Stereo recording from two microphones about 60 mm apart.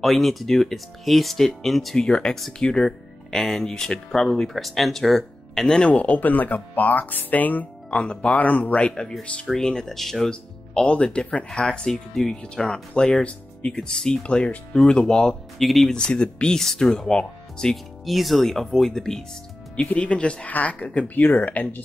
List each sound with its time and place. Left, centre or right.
0.0 s speech: centre
5.9 s speech: left
7.9 s speech: centre
15.6 s speech: centre
15.9 s speech: centre
18.0 s speech: centre
19.7 s speech: centre
21.2 s speech: left